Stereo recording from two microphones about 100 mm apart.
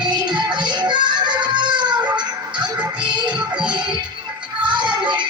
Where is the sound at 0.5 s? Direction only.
50° right (ahead or behind).